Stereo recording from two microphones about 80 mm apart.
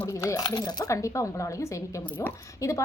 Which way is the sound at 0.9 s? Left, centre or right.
Left.